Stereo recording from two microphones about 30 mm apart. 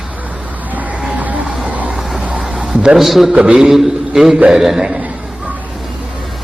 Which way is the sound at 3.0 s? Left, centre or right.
Centre.